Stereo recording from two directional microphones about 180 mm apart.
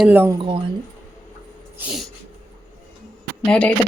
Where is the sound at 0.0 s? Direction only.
10° right (ahead or behind).